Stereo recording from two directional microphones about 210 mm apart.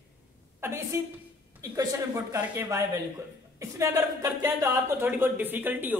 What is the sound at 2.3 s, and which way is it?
A woman's voice, 10° right (ahead or behind).